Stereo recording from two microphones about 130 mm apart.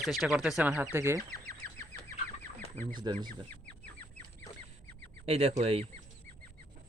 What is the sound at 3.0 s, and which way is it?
Speech, 35° right (ahead or behind).